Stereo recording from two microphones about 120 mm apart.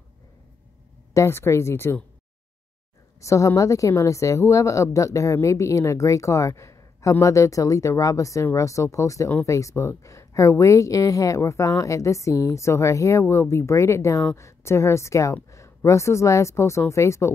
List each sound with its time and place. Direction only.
1.1 s a woman's voice: 20° left (ahead or behind)
3.2 s a woman's voice: 25° left (ahead or behind)